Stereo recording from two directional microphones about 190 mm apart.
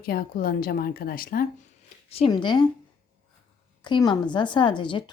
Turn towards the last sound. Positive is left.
turn(degrees=25)  # may be behind; listen again after turning